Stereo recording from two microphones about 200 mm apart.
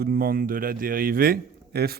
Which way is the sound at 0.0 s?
45° right (ahead or behind).